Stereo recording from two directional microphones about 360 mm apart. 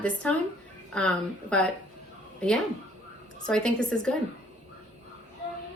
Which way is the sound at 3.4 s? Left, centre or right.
Centre.